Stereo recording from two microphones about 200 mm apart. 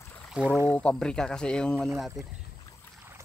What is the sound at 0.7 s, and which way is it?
Speech, 5° left (ahead or behind).